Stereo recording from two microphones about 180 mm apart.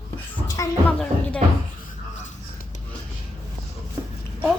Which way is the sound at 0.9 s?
5° left (ahead or behind).